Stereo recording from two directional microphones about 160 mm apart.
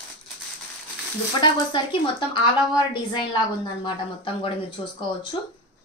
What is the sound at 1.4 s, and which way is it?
A woman's voice, 30° left (ahead or behind).